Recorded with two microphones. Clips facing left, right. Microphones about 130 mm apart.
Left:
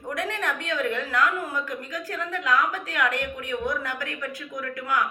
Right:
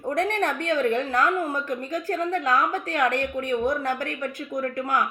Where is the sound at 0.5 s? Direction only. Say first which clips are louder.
Right 5 dB; 50° right (ahead or behind).